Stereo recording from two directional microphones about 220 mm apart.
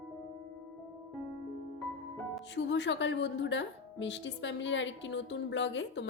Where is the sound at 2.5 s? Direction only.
55° left (ahead or behind).